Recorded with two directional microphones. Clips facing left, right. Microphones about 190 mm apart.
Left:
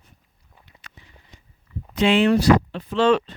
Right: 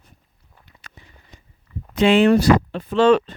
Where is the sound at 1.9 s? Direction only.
50° right (ahead or behind).